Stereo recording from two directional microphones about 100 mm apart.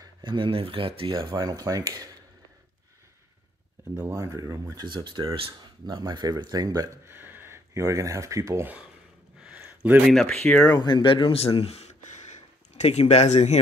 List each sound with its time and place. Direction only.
0.2 s speech: 55° right (ahead or behind)
1.1 s speech: 45° right (ahead or behind)
3.9 s speech: 30° right (ahead or behind)
4.9 s speech: 55° right (ahead or behind)
5.9 s speech: 45° right (ahead or behind)
7.1 s speech: 20° right (ahead or behind)
9.4 s a sound: 15° right (ahead or behind)
10.0 s speech: 5° left (ahead or behind)
10.8 s speech: 50° left (ahead or behind); by 11.5 s 75° left (ahead or behind)
11.5 s speech: 85° left